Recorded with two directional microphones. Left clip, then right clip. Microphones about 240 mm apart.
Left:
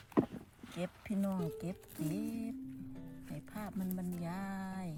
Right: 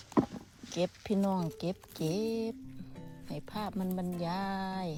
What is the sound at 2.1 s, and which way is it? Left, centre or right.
Speech, centre.